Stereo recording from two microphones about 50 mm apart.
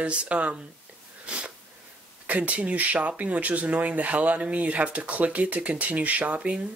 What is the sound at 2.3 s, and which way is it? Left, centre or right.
Speech, right.